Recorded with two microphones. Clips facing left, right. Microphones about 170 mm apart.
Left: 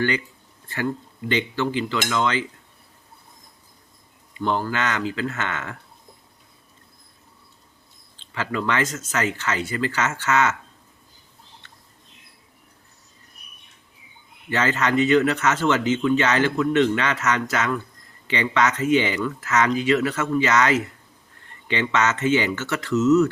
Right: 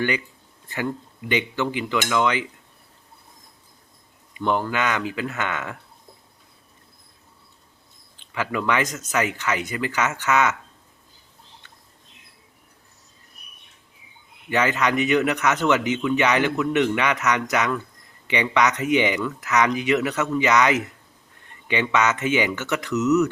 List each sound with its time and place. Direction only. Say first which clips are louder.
1.3 s speech: left 1 dB; 15° right (ahead or behind)
4.5 s speech: right 2 dB; 15° right (ahead or behind)
8.1 s speech: right 1 dB; 15° right (ahead or behind)
14.5 s speech: even; 15° right (ahead or behind)